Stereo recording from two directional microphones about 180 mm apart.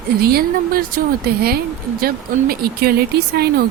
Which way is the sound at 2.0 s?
60° right (ahead or behind).